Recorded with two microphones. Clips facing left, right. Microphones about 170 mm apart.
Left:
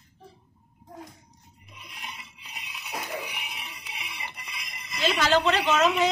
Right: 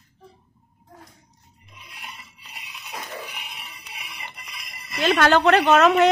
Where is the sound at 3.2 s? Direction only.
10° left (ahead or behind).